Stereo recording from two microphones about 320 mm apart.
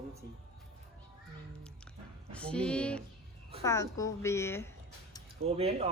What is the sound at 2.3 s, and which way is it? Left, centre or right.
A woman's voice, centre.